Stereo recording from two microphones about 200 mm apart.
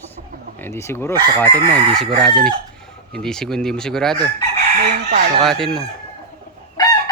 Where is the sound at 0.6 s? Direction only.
10° left (ahead or behind).